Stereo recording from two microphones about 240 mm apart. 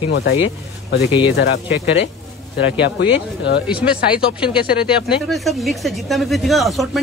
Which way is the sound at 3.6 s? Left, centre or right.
Centre.